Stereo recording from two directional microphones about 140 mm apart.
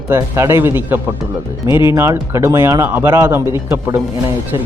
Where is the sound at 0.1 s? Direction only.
20° right (ahead or behind).